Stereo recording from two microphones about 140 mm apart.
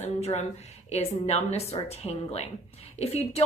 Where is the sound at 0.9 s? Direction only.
50° left (ahead or behind).